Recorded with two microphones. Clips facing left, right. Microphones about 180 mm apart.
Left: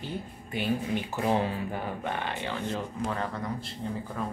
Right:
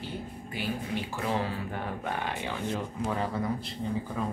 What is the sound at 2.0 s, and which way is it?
Speech, 10° right (ahead or behind).